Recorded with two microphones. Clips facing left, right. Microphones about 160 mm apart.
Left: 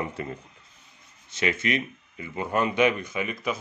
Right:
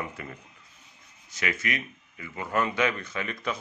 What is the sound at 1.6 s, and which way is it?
Speech, 25° left (ahead or behind).